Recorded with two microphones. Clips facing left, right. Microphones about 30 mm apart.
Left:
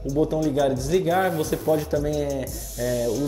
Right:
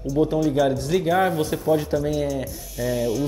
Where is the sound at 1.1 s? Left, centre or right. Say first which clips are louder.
Right 2 dB; right.